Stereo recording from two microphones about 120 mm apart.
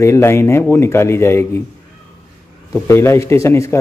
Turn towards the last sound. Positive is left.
turn(degrees=25)  # may be behind; listen again after turning